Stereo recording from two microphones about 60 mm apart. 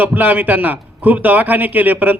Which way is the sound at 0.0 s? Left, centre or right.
Right.